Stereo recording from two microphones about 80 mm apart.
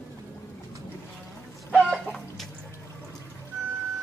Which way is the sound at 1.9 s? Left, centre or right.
Centre.